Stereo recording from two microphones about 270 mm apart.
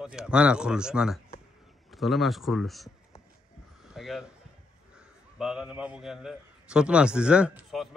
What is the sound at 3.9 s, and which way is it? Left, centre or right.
Speech, centre.